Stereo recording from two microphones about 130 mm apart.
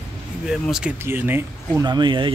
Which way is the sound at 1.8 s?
35° right (ahead or behind).